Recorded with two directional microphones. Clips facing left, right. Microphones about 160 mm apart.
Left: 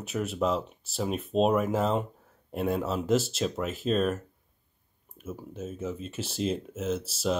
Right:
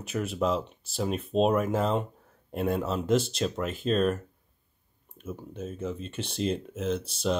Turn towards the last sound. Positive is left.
turn(degrees=5)  # may be behind; listen again after turning